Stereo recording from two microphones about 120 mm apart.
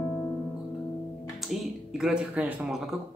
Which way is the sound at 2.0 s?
10° right (ahead or behind).